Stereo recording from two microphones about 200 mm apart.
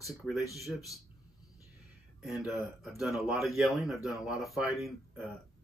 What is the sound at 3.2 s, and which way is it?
Speech, centre (ahead or behind).